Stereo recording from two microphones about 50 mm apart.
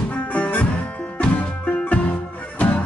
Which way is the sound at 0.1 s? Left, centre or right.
Left.